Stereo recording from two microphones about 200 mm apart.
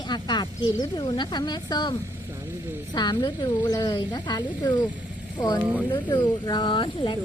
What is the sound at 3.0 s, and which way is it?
Speech, 20° left (ahead or behind).